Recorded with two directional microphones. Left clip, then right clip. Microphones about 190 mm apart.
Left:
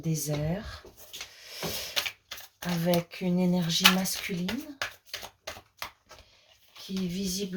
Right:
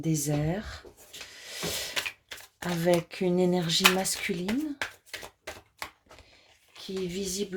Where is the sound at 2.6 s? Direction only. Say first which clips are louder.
Right 3 dB; 40° right (ahead or behind).